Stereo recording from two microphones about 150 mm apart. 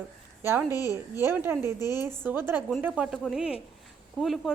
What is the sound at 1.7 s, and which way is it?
Speech, 25° left (ahead or behind).